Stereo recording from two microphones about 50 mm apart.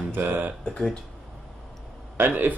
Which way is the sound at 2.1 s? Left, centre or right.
Right.